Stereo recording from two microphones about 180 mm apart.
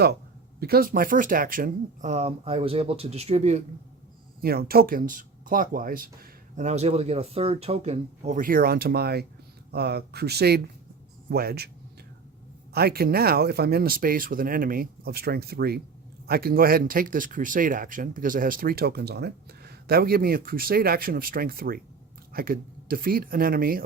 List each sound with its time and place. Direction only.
0.6 s speech: 55° right (ahead or behind); by 3.6 s 35° right (ahead or behind)
4.4 s speech: 60° right (ahead or behind)
12.7 s speech: 60° right (ahead or behind)